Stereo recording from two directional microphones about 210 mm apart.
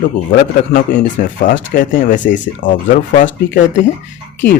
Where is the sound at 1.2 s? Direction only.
45° left (ahead or behind).